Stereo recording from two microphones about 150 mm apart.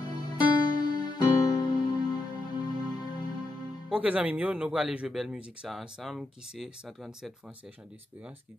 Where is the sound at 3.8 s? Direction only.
5° right (ahead or behind).